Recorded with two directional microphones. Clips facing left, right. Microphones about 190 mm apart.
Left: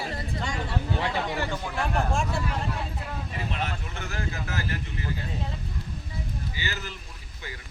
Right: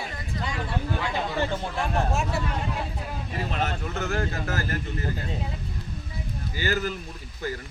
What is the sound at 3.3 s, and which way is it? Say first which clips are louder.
Speech: right 5 dB; 40° right (ahead or behind).